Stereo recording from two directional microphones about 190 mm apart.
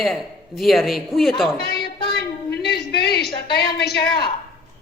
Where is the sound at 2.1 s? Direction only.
60° left (ahead or behind).